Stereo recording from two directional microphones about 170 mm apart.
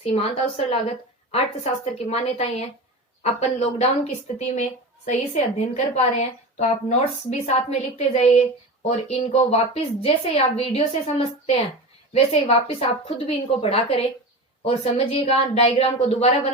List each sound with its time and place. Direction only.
0.0 s a woman's voice: 35° left (ahead or behind)
12.1 s a woman's voice: 35° left (ahead or behind)